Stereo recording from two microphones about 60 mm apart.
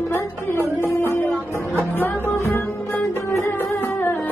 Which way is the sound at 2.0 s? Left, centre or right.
Left.